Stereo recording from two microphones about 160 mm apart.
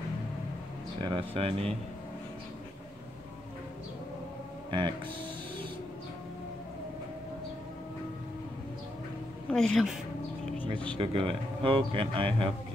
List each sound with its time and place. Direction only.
1.0 s speech: 35° right (ahead or behind)
4.6 s speech: 30° right (ahead or behind)
9.5 s a woman's voice: 5° left (ahead or behind)
10.4 s a sound: 5° left (ahead or behind)
11.0 s speech: 35° right (ahead or behind)